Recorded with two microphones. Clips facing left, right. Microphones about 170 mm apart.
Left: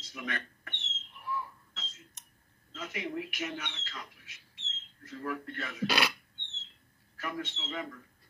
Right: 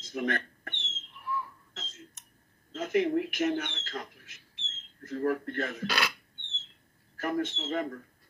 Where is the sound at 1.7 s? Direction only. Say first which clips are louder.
Right 6 dB; 50° right (ahead or behind).